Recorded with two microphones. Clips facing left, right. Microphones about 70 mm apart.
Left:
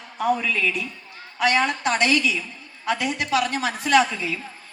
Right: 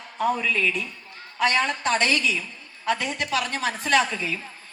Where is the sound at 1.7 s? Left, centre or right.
Right.